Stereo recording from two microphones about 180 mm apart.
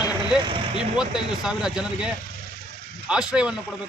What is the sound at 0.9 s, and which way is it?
A man's voice, 5° right (ahead or behind).